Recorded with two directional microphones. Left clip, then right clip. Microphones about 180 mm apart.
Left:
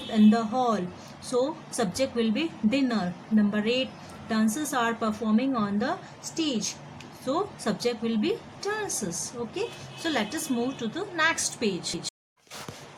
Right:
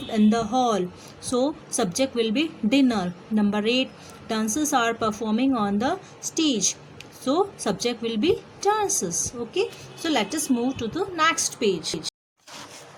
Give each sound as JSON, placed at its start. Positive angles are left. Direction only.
{"t": 0.1, "sound": "a woman's voice", "side_deg": -35}